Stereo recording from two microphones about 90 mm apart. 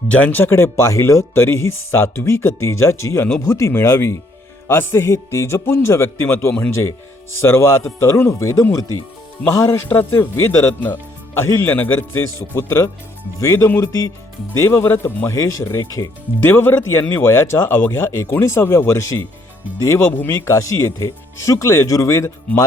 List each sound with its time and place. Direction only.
0.1 s speech: 15° left (ahead or behind); by 16.0 s 35° left (ahead or behind)
16.4 s speech: 25° left (ahead or behind)